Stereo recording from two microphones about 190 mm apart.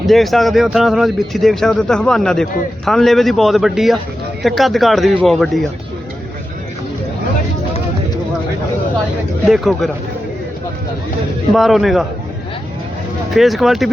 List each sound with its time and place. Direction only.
0.1 s speech: centre (ahead or behind)
9.5 s speech: centre (ahead or behind)
11.5 s speech: centre (ahead or behind)
13.3 s speech: centre (ahead or behind)